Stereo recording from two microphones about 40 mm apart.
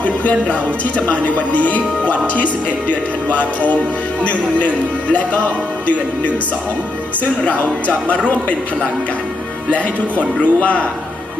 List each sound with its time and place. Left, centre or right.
0.0 s music: left
5.8 s music: left
7.4 s music: left
9.7 s music: left